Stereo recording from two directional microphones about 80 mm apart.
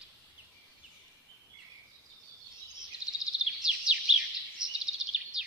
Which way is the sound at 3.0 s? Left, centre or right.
Centre.